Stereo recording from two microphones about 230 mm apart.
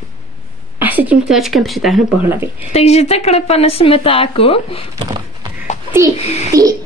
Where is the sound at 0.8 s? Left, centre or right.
Centre.